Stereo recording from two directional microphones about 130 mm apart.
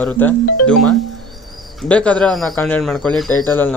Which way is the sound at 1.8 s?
10° left (ahead or behind).